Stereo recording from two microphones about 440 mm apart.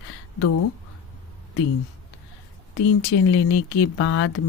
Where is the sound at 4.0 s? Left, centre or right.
Left.